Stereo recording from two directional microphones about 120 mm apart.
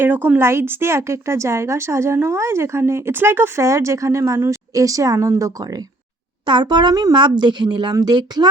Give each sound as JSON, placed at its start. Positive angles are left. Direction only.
{"t": 0.0, "sound": "a woman's voice", "side_deg": -15}
{"t": 6.4, "sound": "speech", "side_deg": -40}